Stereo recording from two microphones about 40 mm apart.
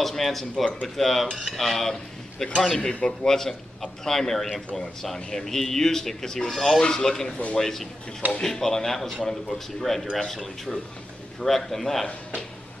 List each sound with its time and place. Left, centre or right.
0.0 s a man's voice: centre
2.8 s a man's voice: left
3.3 s speech: centre